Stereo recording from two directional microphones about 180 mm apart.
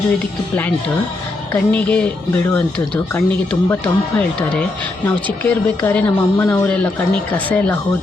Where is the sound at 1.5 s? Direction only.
10° left (ahead or behind).